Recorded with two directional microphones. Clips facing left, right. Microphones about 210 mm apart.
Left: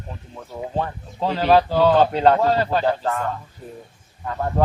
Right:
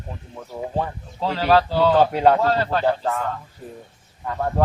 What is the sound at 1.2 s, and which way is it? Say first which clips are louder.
Speech: left 1 dB; 15° left (ahead or behind).